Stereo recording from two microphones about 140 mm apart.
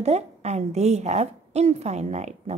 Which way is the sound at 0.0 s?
50° right (ahead or behind).